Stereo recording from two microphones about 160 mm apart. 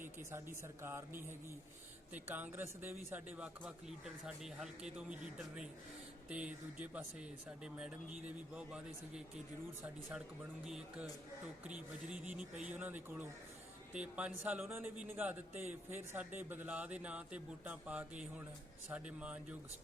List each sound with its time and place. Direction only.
0.0 s speech: 15° right (ahead or behind)